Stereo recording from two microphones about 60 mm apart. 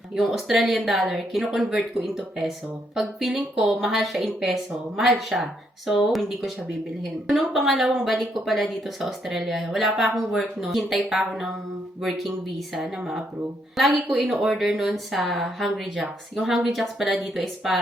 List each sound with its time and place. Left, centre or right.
0.2 s speech: centre